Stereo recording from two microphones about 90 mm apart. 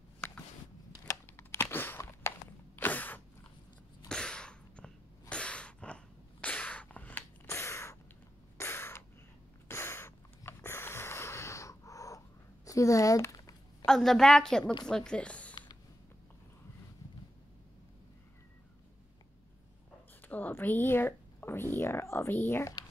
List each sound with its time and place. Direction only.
1.6 s a sound: 25° left (ahead or behind)
7.4 s gasp: 35° left (ahead or behind)
8.5 s a sound: 25° left (ahead or behind)
13.8 s a woman's voice: 5° left (ahead or behind)
14.6 s a woman's voice: 50° left (ahead or behind)
14.9 s a woman's voice: 10° left (ahead or behind)
20.2 s speech: 20° left (ahead or behind)